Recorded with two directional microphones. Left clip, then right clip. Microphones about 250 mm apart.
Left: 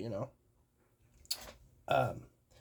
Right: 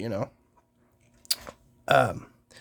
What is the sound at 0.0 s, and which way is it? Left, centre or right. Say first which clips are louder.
Speech: right 9 dB; right.